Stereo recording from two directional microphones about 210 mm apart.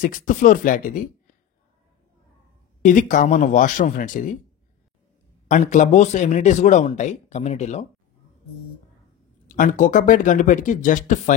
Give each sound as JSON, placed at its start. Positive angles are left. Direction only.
{"t": 0.0, "sound": "speech", "side_deg": 40}
{"t": 2.8, "sound": "speech", "side_deg": 40}
{"t": 5.5, "sound": "speech", "side_deg": 35}
{"t": 9.5, "sound": "speech", "side_deg": 40}